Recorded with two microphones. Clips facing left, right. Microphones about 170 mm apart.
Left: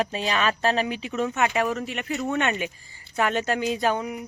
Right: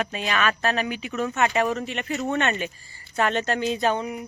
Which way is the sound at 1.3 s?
10° left (ahead or behind).